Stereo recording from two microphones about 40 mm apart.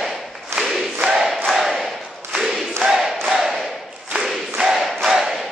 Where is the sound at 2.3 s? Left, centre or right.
Centre.